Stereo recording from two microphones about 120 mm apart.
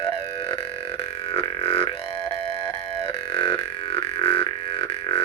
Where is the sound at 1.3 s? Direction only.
50° left (ahead or behind).